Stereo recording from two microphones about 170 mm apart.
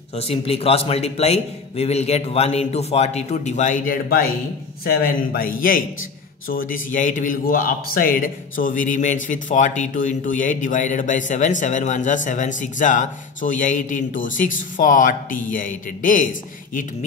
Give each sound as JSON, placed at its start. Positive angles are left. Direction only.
{"t": 0.1, "sound": "a man's voice", "side_deg": 35}